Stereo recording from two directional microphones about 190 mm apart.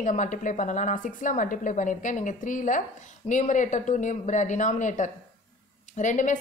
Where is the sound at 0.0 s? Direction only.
40° left (ahead or behind).